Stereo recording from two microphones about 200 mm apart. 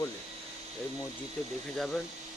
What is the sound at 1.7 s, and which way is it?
Speech, centre (ahead or behind).